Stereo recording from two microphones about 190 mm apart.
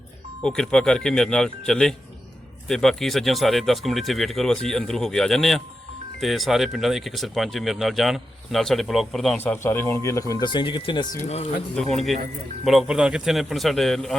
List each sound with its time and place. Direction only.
0.4 s speech: 5° left (ahead or behind); by 11.1 s 25° left (ahead or behind)
11.1 s speech: 35° left (ahead or behind)
11.7 s speech: 5° left (ahead or behind)